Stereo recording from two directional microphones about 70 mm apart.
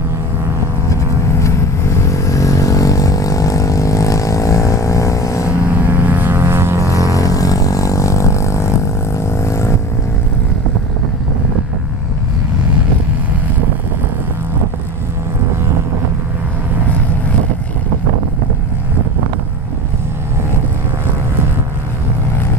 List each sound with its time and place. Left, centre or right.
2.0 s vehicle: left
5.9 s vehicle: right
6.9 s vehicle: left